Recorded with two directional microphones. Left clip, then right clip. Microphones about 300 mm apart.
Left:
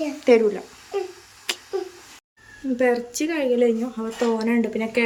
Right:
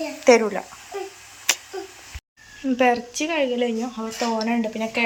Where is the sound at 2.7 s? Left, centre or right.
Centre.